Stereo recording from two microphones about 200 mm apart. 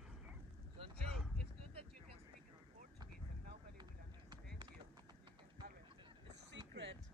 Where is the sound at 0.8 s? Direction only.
30° right (ahead or behind).